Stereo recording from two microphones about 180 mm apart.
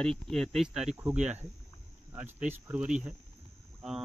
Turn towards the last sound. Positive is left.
turn(degrees=-5)  # may be behind; listen again after turning